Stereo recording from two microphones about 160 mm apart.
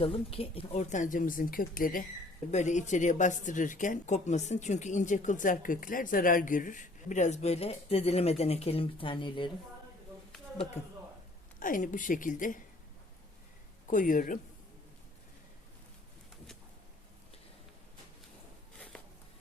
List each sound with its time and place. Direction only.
0.0 s speech: 35° left (ahead or behind); by 2.0 s 60° left (ahead or behind)
2.5 s speech: 50° left (ahead or behind); by 9.5 s 30° left (ahead or behind)
11.6 s speech: 55° left (ahead or behind)
13.9 s speech: 55° left (ahead or behind)
18.9 s a sound: 5° left (ahead or behind)